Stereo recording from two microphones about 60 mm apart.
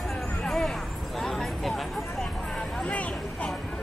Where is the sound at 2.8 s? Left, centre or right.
Left.